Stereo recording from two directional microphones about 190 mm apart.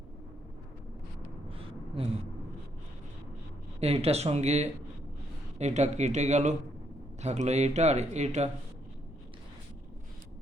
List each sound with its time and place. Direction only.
1.5 s gasp: 30° right (ahead or behind)
3.8 s speech: 30° right (ahead or behind)